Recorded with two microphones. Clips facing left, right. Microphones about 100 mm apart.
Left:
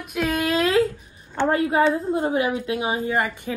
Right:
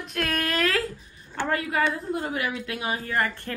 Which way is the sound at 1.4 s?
30° left (ahead or behind).